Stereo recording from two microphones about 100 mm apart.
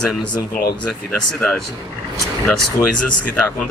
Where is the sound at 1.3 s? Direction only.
5° left (ahead or behind).